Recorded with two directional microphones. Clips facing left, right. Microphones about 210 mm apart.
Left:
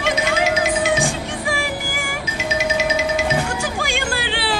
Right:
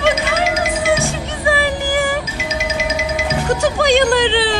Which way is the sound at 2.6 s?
Centre (ahead or behind).